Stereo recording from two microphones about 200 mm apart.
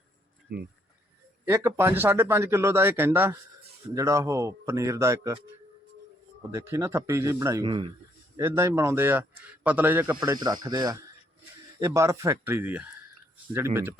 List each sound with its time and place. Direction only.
0.5 s speech: 55° right (ahead or behind)
1.5 s speech: 15° right (ahead or behind)
6.5 s speech: 15° right (ahead or behind)
8.4 s speech: 15° right (ahead or behind)
10.2 s speech: 20° right (ahead or behind)